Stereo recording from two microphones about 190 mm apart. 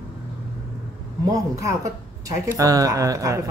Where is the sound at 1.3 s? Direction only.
15° right (ahead or behind).